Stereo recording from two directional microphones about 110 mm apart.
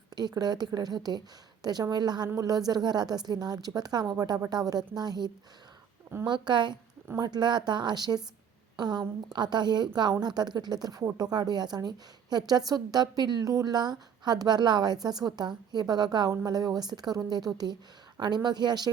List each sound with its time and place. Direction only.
0.2 s a woman's voice: 40° right (ahead or behind)